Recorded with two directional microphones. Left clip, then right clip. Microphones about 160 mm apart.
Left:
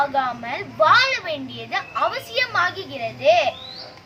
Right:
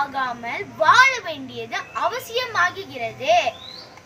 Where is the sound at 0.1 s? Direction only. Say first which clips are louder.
Left 2 dB; 15° left (ahead or behind).